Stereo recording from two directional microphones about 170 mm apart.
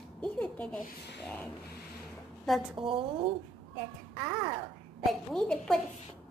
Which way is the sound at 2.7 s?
30° right (ahead or behind).